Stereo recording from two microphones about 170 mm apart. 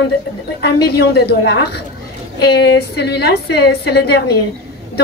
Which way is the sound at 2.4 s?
80° left.